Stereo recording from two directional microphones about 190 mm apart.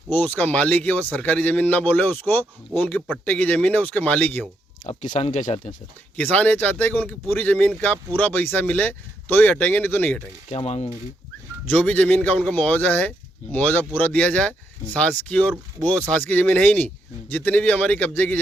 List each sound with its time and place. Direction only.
0.1 s a man's voice: 10° left (ahead or behind)
4.8 s speech: 40° left (ahead or behind)
6.1 s a man's voice: 5° left (ahead or behind)
10.5 s speech: 35° left (ahead or behind)
11.7 s a man's voice: 5° left (ahead or behind)